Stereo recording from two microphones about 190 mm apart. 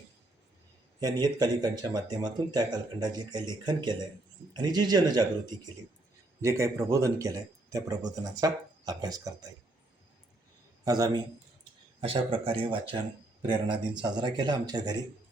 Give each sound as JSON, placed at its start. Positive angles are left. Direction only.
{"t": 0.9, "sound": "speech", "side_deg": -20}
{"t": 6.4, "sound": "speech", "side_deg": -15}
{"t": 10.8, "sound": "speech", "side_deg": -20}